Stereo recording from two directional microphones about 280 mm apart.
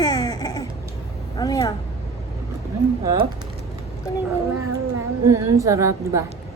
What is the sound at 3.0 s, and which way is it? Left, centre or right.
Speech, centre.